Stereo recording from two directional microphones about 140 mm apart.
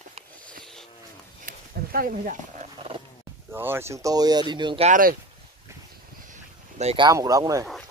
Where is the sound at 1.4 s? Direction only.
90° right.